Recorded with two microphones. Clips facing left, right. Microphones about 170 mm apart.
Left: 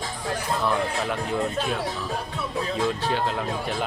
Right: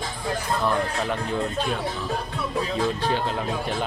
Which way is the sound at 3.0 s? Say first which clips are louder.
Right 1 dB; 5° left (ahead or behind).